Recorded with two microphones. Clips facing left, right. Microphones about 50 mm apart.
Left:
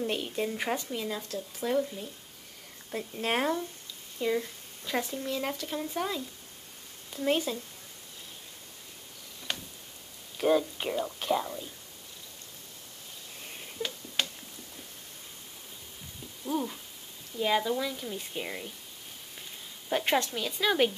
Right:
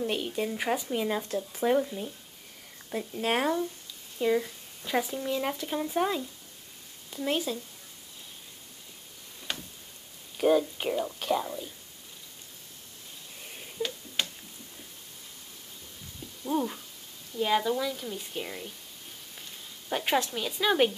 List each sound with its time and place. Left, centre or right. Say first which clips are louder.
0.0 s speech: right 1 dB; centre
0.9 s speech: right 5 dB; right
2.9 s speech: right 2 dB; centre
7.1 s speech: left 1 dB; centre
10.3 s speech: right 2 dB; centre
13.7 s tick-tock: right 1 dB; centre
16.4 s speech: right 3 dB; centre
17.4 s speech: right 1 dB; centre
19.9 s speech: even; centre